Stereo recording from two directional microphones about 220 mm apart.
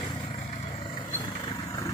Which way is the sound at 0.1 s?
20° left (ahead or behind).